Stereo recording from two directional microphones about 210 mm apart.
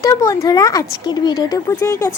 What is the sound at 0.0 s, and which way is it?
Speech, 15° left (ahead or behind).